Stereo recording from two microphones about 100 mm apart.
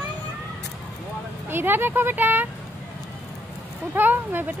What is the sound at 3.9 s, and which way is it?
Speech, 20° right (ahead or behind).